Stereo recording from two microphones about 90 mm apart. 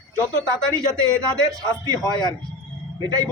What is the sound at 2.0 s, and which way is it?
Speech, 50° left (ahead or behind).